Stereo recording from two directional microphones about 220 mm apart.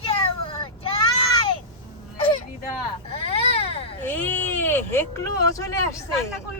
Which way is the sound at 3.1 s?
25° left (ahead or behind).